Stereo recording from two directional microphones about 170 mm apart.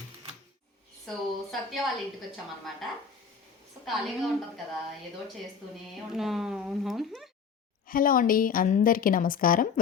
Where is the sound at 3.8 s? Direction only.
Centre (ahead or behind).